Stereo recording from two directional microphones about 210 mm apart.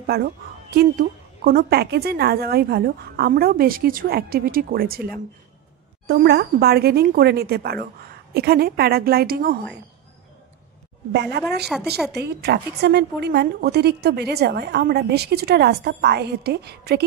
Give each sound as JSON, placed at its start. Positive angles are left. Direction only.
{"t": 0.0, "sound": "a woman's voice", "side_deg": -50}
{"t": 11.1, "sound": "a woman's voice", "side_deg": -50}
{"t": 11.6, "sound": "a woman's voice", "side_deg": 0}
{"t": 12.1, "sound": "a woman's voice", "side_deg": -50}